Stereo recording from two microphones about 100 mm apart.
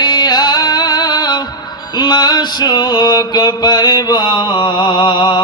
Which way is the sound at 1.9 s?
45° left (ahead or behind).